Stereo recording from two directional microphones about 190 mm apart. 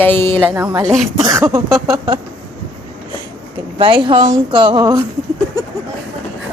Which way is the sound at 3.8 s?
25° right (ahead or behind).